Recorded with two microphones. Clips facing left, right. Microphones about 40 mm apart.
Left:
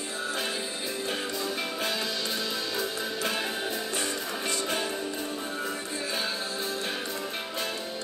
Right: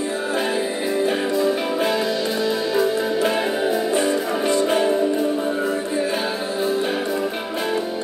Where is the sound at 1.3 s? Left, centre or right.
Centre.